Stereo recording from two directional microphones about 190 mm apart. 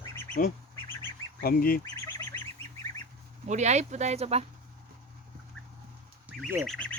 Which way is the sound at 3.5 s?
35° right (ahead or behind).